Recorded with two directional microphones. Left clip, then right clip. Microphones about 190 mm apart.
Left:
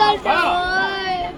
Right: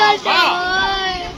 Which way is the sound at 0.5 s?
25° right (ahead or behind).